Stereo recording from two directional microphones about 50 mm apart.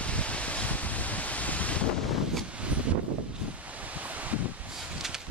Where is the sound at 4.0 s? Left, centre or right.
Right.